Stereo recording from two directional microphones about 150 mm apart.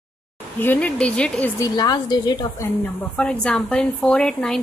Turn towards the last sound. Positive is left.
turn(degrees=0)  # may be behind; listen again after turning